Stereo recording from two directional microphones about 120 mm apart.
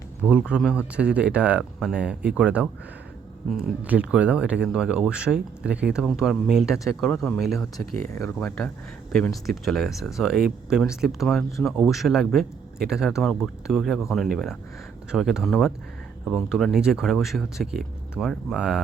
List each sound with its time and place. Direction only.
0.2 s speech: 10° right (ahead or behind)
8.1 s speech: 25° left (ahead or behind)
8.4 s speech: 15° left (ahead or behind)
9.1 s speech: 5° left (ahead or behind)